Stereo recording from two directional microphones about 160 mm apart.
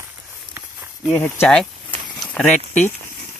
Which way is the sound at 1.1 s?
15° left (ahead or behind).